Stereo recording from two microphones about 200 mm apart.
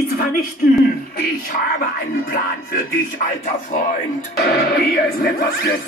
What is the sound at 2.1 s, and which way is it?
Music, 45° left (ahead or behind).